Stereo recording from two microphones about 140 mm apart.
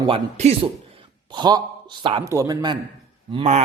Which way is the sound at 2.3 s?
25° right (ahead or behind).